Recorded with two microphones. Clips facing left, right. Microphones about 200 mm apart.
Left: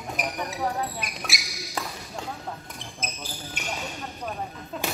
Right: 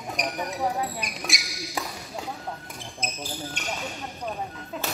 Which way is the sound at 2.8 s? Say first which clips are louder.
Right 2 dB; centre (ahead or behind).